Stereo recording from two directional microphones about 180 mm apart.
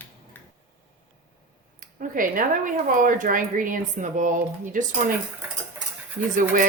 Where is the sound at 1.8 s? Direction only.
50° right (ahead or behind).